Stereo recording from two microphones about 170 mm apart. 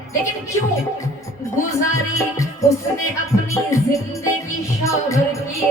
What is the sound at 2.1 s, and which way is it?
Music, 15° left (ahead or behind).